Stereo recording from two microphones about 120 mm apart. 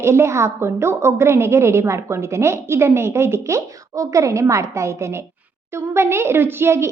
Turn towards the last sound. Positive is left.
turn(degrees=-20)  # may be behind; listen again after turning